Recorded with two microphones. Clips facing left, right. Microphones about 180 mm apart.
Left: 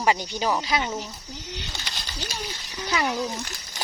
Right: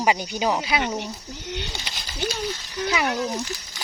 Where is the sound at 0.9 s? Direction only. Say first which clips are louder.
Right 3 dB; 65° right (ahead or behind).